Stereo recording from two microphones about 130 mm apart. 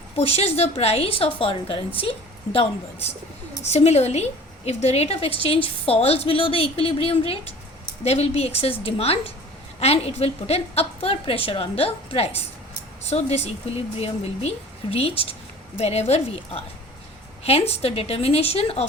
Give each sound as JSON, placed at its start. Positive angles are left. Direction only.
{"t": 0.2, "sound": "a woman's voice", "side_deg": 50}